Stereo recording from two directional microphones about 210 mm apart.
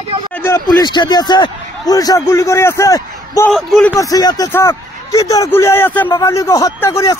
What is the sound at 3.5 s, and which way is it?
Speech, 5° left (ahead or behind).